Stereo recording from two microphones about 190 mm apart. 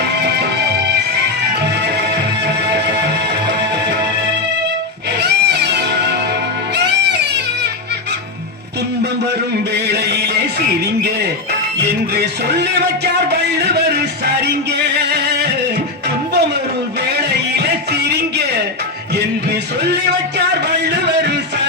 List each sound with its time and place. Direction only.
0.0 s music: 60° right (ahead or behind)
2.6 s music: 65° right (ahead or behind)
5.2 s music: 60° right (ahead or behind)
9.7 s music: 60° right (ahead or behind)
12.1 s music: 60° right (ahead or behind)
13.3 s a sound: 60° right (ahead or behind)
14.9 s music: 60° right (ahead or behind)
17.3 s music: 60° right (ahead or behind)
20.5 s a sound: 60° right (ahead or behind)